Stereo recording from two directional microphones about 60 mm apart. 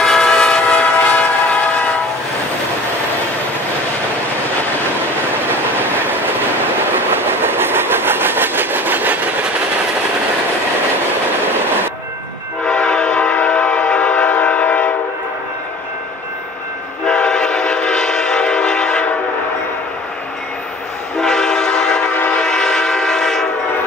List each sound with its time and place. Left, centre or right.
0.0 s train: centre
6.9 s train: right
12.6 s train: centre
17.0 s train: centre
21.2 s train: centre